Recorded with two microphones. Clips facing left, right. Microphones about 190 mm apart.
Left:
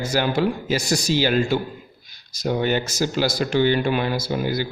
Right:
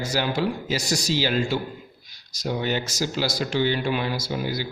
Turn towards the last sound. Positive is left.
turn(degrees=55)  # may be behind; listen again after turning